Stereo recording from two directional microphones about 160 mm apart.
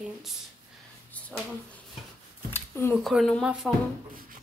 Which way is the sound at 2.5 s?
15° left (ahead or behind).